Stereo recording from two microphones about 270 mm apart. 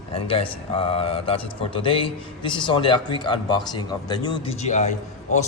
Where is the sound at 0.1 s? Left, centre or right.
Centre.